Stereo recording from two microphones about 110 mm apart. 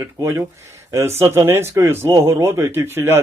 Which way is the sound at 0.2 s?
25° right (ahead or behind).